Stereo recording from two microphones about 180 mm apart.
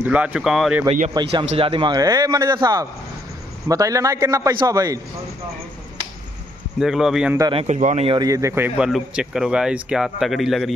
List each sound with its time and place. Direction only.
0.0 s speech: 5° right (ahead or behind)
1.1 s a man's voice: 25° right (ahead or behind)
6.8 s a man's voice: centre (ahead or behind)
7.5 s speech: 40° right (ahead or behind)
8.2 s a man's voice: 20° right (ahead or behind); by 10.7 s centre (ahead or behind)